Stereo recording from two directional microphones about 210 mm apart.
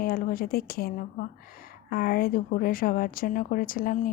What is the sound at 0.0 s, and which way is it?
Speech, 45° left (ahead or behind).